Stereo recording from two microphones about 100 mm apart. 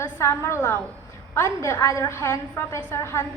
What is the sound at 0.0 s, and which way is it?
A woman's voice, 25° left (ahead or behind).